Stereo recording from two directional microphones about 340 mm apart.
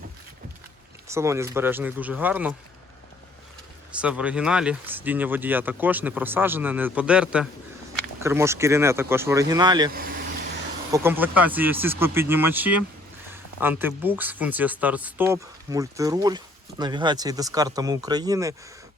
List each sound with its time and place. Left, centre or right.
1.0 s speech: centre
4.0 s speech: centre
9.9 s vehicle: right
10.9 s speech: centre